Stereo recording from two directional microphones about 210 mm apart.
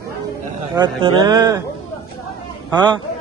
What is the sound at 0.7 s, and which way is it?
Speech, 20° right (ahead or behind).